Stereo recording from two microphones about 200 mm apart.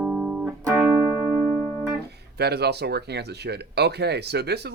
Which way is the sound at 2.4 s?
55° right (ahead or behind).